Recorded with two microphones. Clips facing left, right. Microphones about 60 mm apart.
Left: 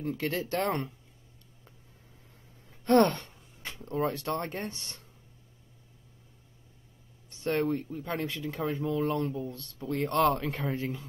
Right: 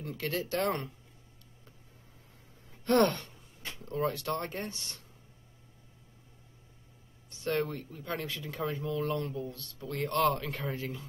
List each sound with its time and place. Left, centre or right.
0.2 s speech: left
2.8 s speech: left
7.2 s speech: left